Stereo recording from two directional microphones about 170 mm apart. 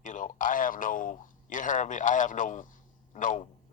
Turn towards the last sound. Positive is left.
turn(degrees=50)  # may be behind; listen again after turning